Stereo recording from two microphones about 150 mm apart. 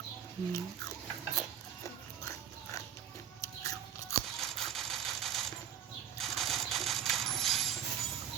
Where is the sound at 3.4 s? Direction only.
20° left (ahead or behind).